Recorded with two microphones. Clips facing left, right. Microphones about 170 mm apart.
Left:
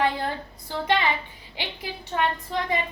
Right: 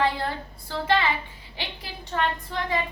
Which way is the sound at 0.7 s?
15° left (ahead or behind).